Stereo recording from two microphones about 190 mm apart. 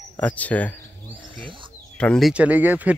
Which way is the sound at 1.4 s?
25° right (ahead or behind).